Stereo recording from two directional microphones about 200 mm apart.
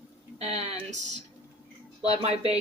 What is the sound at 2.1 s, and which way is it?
Speech, 30° right (ahead or behind).